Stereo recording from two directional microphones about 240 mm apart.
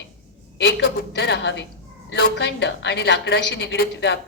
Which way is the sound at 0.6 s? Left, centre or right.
Left.